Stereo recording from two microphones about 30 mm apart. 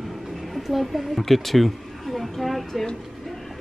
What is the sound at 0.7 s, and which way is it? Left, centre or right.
A woman's voice, centre.